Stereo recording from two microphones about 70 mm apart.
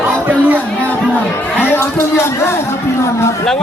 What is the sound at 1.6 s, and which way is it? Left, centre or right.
Speech, left.